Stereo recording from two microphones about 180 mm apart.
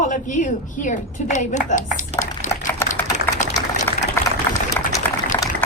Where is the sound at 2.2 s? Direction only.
45° left (ahead or behind).